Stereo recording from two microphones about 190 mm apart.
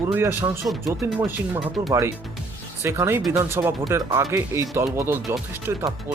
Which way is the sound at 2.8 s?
15° right (ahead or behind).